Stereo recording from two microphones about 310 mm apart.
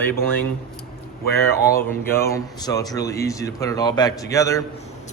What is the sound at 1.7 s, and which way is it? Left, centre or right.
Speech, centre.